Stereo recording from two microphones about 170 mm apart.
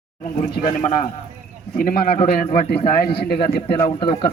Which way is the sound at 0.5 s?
55° left (ahead or behind).